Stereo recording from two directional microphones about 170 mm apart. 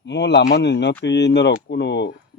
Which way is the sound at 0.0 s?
90° left.